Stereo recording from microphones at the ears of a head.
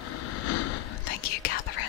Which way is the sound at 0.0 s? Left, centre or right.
Left.